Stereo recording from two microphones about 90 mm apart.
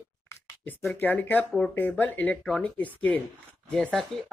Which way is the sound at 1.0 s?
20° left (ahead or behind).